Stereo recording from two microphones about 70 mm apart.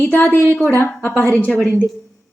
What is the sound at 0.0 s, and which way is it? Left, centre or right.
A woman's voice, left.